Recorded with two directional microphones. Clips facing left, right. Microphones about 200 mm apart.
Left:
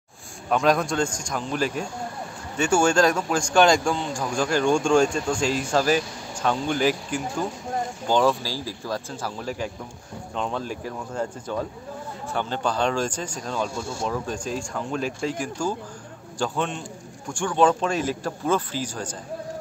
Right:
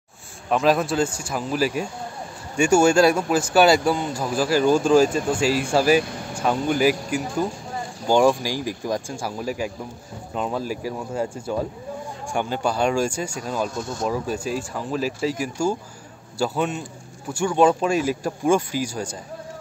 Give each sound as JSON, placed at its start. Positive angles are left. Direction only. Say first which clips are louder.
{"t": 0.5, "sound": "speech", "louder": "right 2 dB", "side_deg": 0}
{"t": 13.7, "sound": "speech", "louder": "right 2 dB", "side_deg": 10}
{"t": 14.0, "sound": "speech", "louder": "right 4 dB", "side_deg": -10}